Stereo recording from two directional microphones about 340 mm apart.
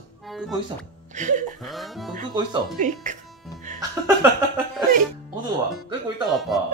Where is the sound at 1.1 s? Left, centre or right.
Right.